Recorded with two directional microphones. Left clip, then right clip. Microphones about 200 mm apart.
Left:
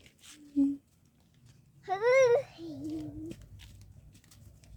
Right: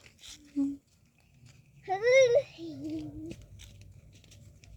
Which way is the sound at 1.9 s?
5° right (ahead or behind).